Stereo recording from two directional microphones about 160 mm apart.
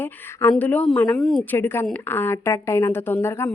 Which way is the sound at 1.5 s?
15° left (ahead or behind).